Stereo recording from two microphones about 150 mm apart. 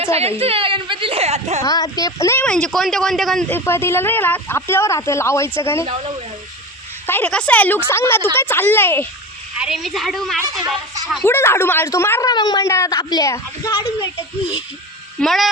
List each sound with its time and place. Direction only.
0.0 s a woman's voice: 40° right (ahead or behind)
1.6 s speech: 25° left (ahead or behind)
2.5 s speech: 5° left (ahead or behind)
3.5 s speech: 15° left (ahead or behind)
7.1 s speech: 10° left (ahead or behind)
9.6 s speech: 5° right (ahead or behind)
11.2 s speech: 15° left (ahead or behind)
12.3 s speech: 30° left (ahead or behind)
15.2 s speech: centre (ahead or behind)